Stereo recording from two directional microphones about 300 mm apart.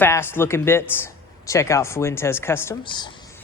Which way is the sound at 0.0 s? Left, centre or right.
Centre.